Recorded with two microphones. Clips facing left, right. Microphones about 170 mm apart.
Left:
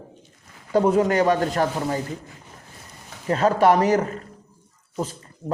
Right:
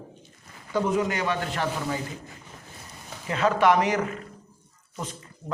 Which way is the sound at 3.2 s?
40° left (ahead or behind).